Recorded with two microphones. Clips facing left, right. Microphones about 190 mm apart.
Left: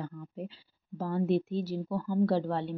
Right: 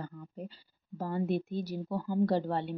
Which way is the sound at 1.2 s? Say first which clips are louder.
Left 7 dB; 50° right (ahead or behind).